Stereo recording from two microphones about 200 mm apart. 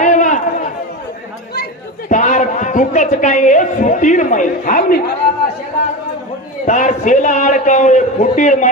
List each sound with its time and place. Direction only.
0.0 s run: 40° left (ahead or behind)
1.5 s a man's voice: 45° left (ahead or behind)
6.6 s a man's voice: 40° left (ahead or behind)